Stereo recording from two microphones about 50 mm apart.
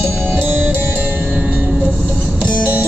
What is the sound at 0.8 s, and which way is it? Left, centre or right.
Music, right.